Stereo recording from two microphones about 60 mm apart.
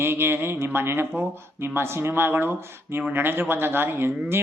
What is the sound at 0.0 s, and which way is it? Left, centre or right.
Speech, right.